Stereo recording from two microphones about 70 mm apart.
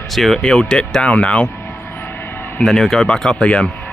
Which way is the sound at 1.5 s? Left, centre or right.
Left.